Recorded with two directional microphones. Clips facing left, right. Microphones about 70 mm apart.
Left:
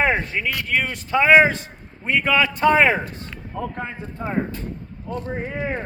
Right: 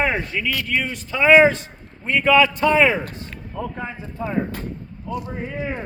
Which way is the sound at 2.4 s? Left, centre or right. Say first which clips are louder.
Even; left.